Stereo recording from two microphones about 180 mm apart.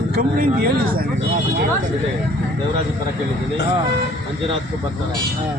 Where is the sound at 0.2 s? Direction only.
50° right (ahead or behind).